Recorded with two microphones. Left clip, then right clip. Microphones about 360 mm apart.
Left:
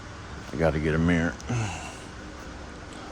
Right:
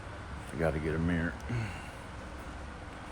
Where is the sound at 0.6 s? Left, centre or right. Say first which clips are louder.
Left 7 dB; left.